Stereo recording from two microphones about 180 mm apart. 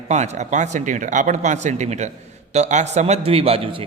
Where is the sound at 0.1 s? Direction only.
40° right (ahead or behind).